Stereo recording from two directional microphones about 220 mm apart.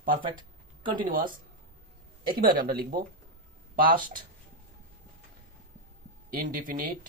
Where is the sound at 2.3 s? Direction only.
40° right (ahead or behind).